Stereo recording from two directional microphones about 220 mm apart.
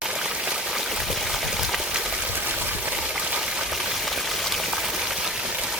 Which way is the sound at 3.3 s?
5° right (ahead or behind).